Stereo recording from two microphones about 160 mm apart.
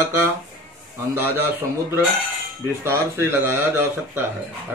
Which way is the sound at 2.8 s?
15° right (ahead or behind).